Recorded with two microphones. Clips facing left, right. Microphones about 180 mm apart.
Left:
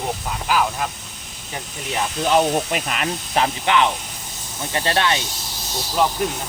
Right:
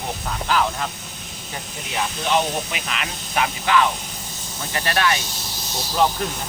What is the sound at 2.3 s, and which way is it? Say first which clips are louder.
Speech: left 5 dB; 45° left (ahead or behind).